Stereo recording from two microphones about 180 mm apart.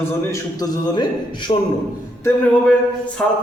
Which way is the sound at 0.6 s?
20° left (ahead or behind).